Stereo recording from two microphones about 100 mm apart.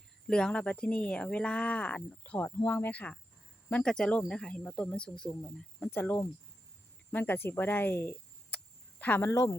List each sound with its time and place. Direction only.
0.3 s speech: 10° left (ahead or behind)
5.9 s speech: 20° left (ahead or behind)